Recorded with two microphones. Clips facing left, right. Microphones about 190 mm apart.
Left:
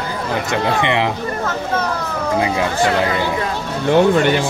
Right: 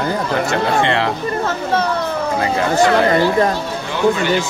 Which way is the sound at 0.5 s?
15° left (ahead or behind).